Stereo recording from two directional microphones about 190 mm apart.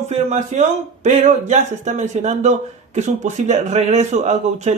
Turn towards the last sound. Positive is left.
turn(degrees=-35)  # may be behind; listen again after turning